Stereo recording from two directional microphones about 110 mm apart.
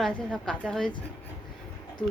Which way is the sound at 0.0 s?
5° left (ahead or behind).